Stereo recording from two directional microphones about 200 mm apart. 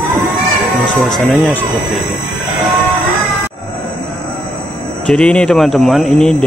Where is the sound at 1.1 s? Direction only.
5° left (ahead or behind).